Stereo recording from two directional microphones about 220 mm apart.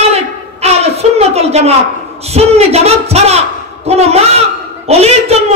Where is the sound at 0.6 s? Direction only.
30° right (ahead or behind).